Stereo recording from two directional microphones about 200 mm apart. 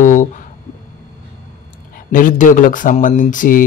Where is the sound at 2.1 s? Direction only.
40° left (ahead or behind).